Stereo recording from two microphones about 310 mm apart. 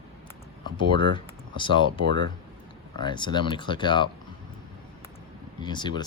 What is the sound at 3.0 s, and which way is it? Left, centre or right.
Speech, centre.